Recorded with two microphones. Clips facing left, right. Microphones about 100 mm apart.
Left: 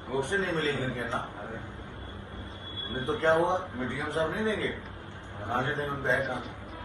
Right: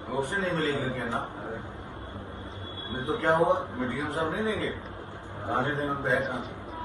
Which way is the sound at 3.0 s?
20° right (ahead or behind).